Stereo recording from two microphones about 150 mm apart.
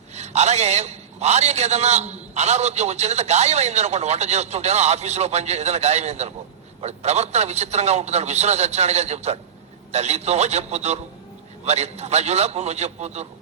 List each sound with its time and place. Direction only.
0.1 s a man's voice: 50° right (ahead or behind)